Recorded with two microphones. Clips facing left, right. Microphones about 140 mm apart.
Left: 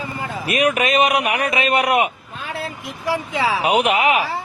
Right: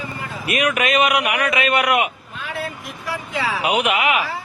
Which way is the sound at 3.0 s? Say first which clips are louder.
Left 4 dB; 20° left (ahead or behind).